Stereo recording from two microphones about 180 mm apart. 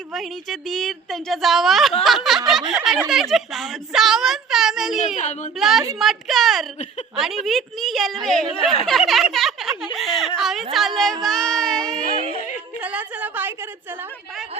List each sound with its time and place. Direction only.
0.1 s a woman's voice: centre (ahead or behind)
5.1 s speech: 40° left (ahead or behind)
5.5 s a woman's voice: centre (ahead or behind)
12.8 s a sound: 10° right (ahead or behind)